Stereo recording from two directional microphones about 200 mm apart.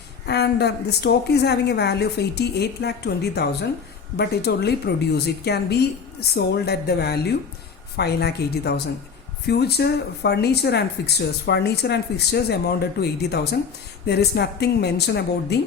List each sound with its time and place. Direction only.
0.3 s a woman's voice: 55° left (ahead or behind)